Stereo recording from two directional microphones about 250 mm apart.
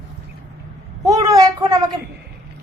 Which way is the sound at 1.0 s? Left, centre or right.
Centre.